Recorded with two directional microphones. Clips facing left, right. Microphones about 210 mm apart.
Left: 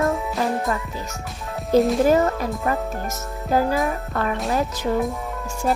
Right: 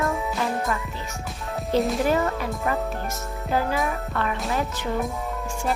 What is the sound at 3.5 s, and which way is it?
Speech, 40° left (ahead or behind).